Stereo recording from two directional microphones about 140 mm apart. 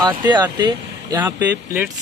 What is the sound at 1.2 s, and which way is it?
Speech, 15° right (ahead or behind).